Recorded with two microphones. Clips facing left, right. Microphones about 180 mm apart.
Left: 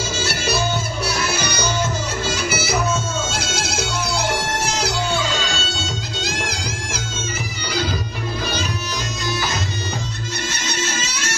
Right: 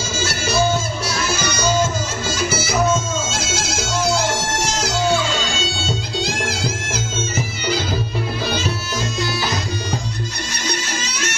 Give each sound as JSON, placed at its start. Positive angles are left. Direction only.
{"t": 0.3, "sound": "music", "side_deg": 60}
{"t": 3.3, "sound": "bagpipes", "side_deg": 60}
{"t": 6.2, "sound": "music", "side_deg": 15}